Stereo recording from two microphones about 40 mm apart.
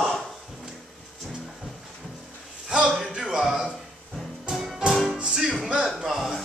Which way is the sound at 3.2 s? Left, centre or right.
Centre.